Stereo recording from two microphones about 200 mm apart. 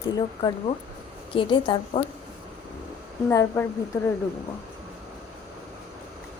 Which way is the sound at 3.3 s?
15° left (ahead or behind).